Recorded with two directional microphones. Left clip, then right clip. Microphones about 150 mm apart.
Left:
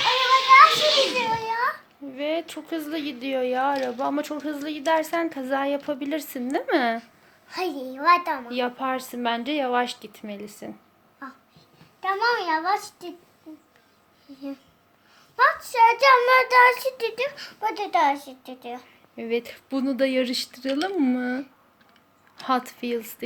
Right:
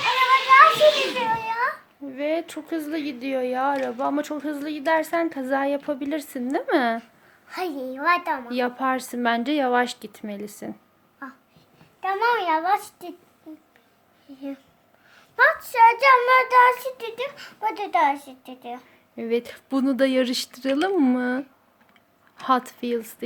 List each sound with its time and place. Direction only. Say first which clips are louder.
0.4 s children playing: even; 20° right (ahead or behind)
1.5 s a sound: even; 5° right (ahead or behind)
2.1 s a child's voice: right 2 dB; 20° right (ahead or behind); by 8.4 s centre (ahead or behind)
8.4 s a woman's voice: right 2 dB; 25° right (ahead or behind)
11.9 s a sound: even; 15° right (ahead or behind)
12.3 s a woman's voice: right 2 dB; 20° right (ahead or behind)
15.1 s a sound: right 2 dB; 20° right (ahead or behind)
15.6 s child singing: right 1 dB; centre (ahead or behind)
19.1 s a woman's voice: right 2 dB; 20° right (ahead or behind)